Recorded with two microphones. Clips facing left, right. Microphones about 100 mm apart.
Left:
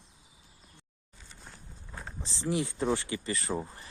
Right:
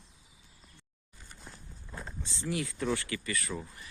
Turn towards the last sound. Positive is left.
turn(degrees=35)  # may be behind; listen again after turning